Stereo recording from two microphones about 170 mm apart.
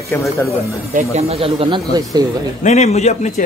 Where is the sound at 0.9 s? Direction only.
40° right (ahead or behind).